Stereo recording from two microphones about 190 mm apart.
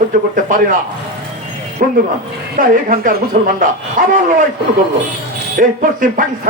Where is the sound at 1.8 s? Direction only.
50° right (ahead or behind).